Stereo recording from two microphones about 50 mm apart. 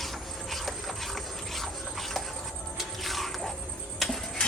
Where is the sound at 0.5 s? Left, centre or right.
Centre.